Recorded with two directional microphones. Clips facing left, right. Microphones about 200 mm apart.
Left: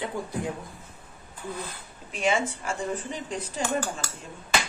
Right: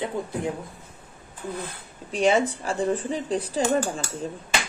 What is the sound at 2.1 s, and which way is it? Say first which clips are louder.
Speech: right 5 dB; 35° right (ahead or behind).